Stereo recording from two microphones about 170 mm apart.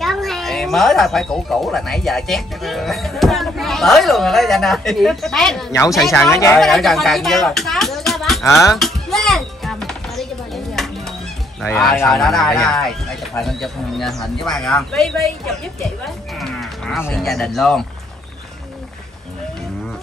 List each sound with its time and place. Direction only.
0.0 s speech: centre (ahead or behind)
6.3 s a woman's voice: 15° left (ahead or behind)
6.6 s speech: centre (ahead or behind)
8.7 s music: centre (ahead or behind)
11.9 s a woman's voice: 10° left (ahead or behind)
16.3 s cattle: centre (ahead or behind)
17.0 s speech: 5° left (ahead or behind)